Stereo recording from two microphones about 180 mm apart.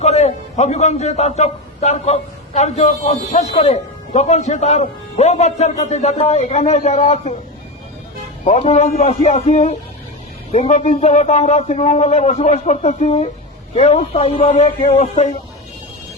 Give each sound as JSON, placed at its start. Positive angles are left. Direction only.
{"t": 0.0, "sound": "a man's voice", "side_deg": 40}
{"t": 8.4, "sound": "a man's voice", "side_deg": 35}